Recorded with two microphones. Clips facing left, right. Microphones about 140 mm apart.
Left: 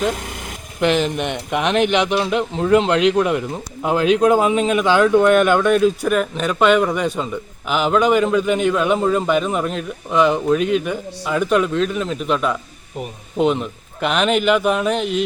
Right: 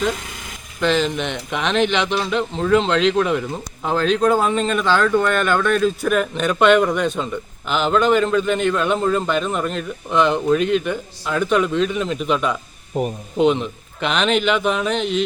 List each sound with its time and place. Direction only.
0.8 s speech: 15° left (ahead or behind)
12.9 s speech: 40° right (ahead or behind)
13.3 s a man's voice: centre (ahead or behind)